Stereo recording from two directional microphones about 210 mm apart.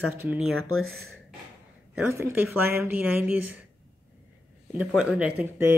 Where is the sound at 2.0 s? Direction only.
10° right (ahead or behind).